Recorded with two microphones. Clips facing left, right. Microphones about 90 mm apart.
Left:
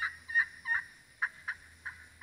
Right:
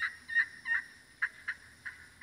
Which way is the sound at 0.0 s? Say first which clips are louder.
Left 1 dB; 20° left (ahead or behind).